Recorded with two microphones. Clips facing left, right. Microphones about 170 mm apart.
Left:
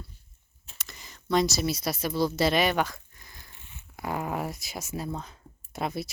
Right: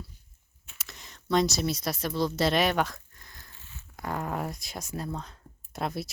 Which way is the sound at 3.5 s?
15° left (ahead or behind).